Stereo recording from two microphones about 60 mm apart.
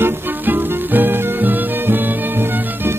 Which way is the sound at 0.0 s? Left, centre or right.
Right.